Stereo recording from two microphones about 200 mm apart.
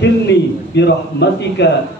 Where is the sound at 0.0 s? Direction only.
60° left (ahead or behind).